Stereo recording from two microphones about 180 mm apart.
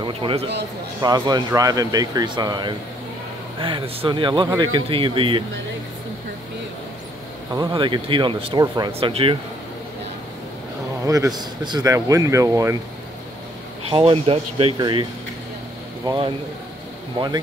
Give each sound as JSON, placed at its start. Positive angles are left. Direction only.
{"t": 0.0, "sound": "speech", "side_deg": -30}
{"t": 7.5, "sound": "speech", "side_deg": -25}
{"t": 11.1, "sound": "speech", "side_deg": -20}
{"t": 13.8, "sound": "speech", "side_deg": -30}